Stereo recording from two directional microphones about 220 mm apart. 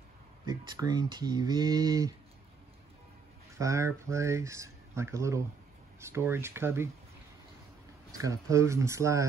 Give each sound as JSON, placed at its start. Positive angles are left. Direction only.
{"t": 0.5, "sound": "speech", "side_deg": -15}
{"t": 3.5, "sound": "speech", "side_deg": -15}
{"t": 8.2, "sound": "speech", "side_deg": -15}